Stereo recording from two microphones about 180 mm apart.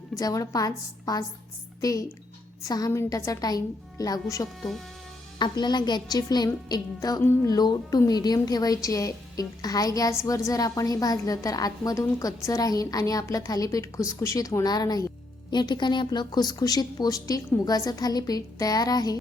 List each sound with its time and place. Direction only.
0.2 s a woman's voice: 20° left (ahead or behind)